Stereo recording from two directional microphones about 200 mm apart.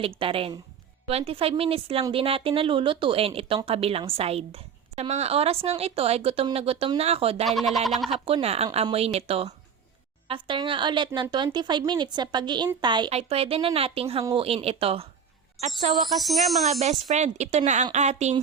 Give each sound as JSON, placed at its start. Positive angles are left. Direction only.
{"t": 0.0, "sound": "a woman's voice", "side_deg": -25}
{"t": 7.4, "sound": "speech", "side_deg": 0}
{"t": 8.1, "sound": "a woman's voice", "side_deg": -30}
{"t": 15.9, "sound": "speech", "side_deg": 0}
{"t": 16.8, "sound": "a woman's voice", "side_deg": -35}